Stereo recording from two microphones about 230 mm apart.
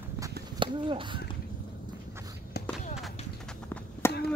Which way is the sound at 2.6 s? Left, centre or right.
Left.